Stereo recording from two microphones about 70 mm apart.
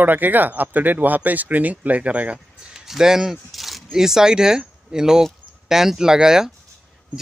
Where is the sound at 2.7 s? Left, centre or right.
Centre.